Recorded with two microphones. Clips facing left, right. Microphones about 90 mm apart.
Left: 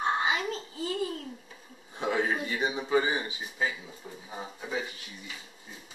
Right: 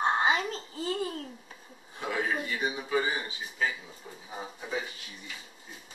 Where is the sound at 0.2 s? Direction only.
40° right (ahead or behind).